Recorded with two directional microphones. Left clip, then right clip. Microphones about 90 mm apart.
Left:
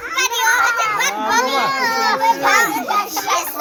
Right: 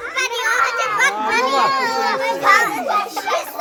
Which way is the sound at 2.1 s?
20° right (ahead or behind).